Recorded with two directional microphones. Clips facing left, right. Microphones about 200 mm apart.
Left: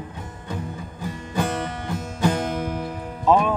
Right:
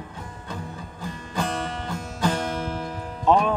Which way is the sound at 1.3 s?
15° left (ahead or behind).